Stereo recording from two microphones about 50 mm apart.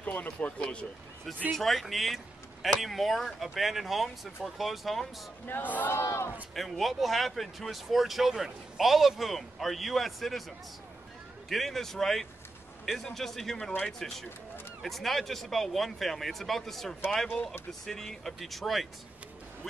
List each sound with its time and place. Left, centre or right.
0.0 s speech: left
0.6 s speech: left
1.5 s speech: centre
5.5 s speech: left
5.9 s speech: left
6.5 s speech: centre
11.4 s speech: centre